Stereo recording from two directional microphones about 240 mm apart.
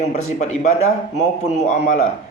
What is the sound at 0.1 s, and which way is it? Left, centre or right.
A man's voice, left.